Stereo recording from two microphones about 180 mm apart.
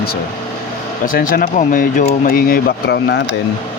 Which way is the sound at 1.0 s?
50° left (ahead or behind).